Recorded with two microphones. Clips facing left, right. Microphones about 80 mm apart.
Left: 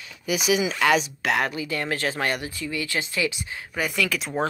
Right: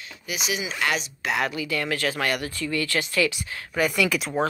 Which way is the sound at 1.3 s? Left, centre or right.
Left.